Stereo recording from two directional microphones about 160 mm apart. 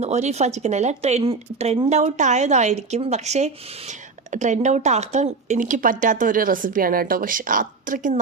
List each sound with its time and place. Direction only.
0.0 s speech: 45° right (ahead or behind)